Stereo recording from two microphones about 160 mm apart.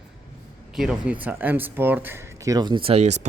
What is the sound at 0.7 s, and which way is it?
A man's voice, 5° right (ahead or behind).